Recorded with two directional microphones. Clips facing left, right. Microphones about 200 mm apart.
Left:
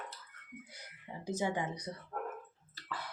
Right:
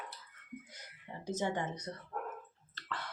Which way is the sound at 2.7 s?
10° left (ahead or behind).